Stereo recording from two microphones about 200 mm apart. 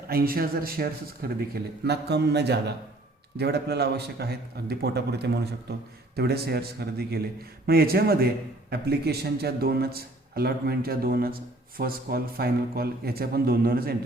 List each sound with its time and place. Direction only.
0.1 s speech: 50° right (ahead or behind)